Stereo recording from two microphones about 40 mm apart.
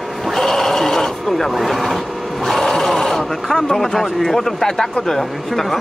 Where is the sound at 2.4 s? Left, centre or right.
Centre.